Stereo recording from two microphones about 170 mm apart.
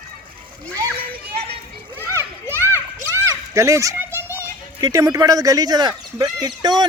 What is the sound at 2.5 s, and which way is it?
Children playing, 15° left (ahead or behind).